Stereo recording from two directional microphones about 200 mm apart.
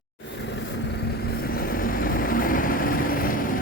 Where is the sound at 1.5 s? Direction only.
45° left (ahead or behind).